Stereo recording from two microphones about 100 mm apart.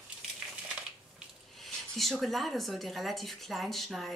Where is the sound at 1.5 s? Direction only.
Centre (ahead or behind).